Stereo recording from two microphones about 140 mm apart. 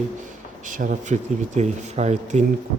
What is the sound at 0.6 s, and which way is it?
Speech, 70° right (ahead or behind).